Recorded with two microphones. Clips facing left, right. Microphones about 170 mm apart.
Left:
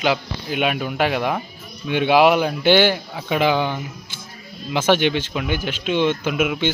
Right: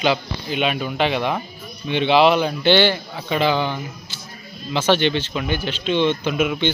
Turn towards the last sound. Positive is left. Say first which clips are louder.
# even
turn(degrees=5)  # may be behind; listen again after turning